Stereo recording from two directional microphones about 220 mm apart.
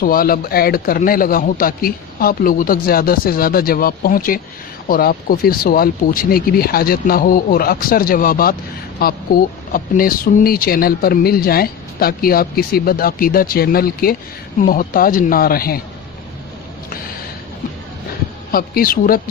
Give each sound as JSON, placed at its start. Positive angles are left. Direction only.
{"t": 0.0, "sound": "a man's voice", "side_deg": 40}
{"t": 18.5, "sound": "a man's voice", "side_deg": 40}